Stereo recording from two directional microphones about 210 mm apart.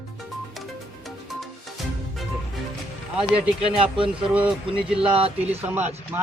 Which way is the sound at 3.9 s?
25° right (ahead or behind).